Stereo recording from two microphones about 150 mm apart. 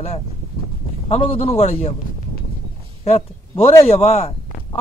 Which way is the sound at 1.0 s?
40° left (ahead or behind).